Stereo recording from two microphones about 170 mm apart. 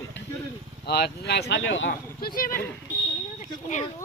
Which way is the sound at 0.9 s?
75° left (ahead or behind).